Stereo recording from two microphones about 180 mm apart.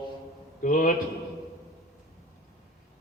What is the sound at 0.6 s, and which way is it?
Speech, 50° left (ahead or behind).